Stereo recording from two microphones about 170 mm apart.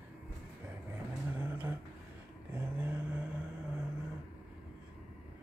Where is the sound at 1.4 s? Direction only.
10° right (ahead or behind).